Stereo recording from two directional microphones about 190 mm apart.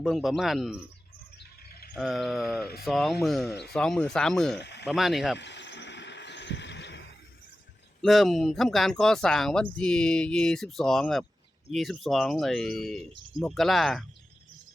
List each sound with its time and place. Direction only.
0.0 s speech: centre (ahead or behind)
1.7 s a sound: 55° left (ahead or behind)
2.0 s speech: centre (ahead or behind)
4.5 s speech: 65° left (ahead or behind)
4.9 s speech: centre (ahead or behind)
5.4 s a sound: 65° left (ahead or behind)
8.0 s speech: centre (ahead or behind)